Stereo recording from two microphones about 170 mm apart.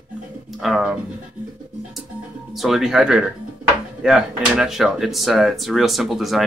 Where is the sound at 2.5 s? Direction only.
Centre (ahead or behind).